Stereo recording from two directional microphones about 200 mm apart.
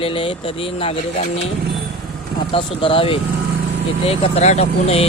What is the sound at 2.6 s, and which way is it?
Speech, 25° left (ahead or behind).